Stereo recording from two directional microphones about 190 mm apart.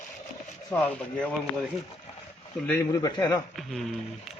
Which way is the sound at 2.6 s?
15° left (ahead or behind).